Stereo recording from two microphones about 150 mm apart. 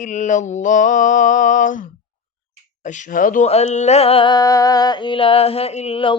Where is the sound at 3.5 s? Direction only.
50° left (ahead or behind).